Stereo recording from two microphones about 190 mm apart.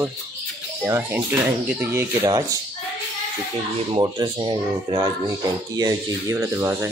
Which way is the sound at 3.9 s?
25° right (ahead or behind).